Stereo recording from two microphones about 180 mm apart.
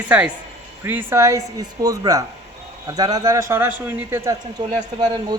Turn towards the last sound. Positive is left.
turn(degrees=-25)  # may be behind; listen again after turning